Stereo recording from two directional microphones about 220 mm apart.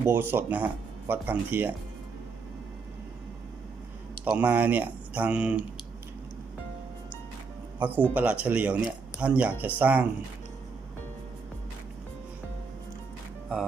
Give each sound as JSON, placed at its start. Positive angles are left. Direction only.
{"t": 0.0, "sound": "speech", "side_deg": -10}
{"t": 4.3, "sound": "speech", "side_deg": -5}
{"t": 7.8, "sound": "speech", "side_deg": -10}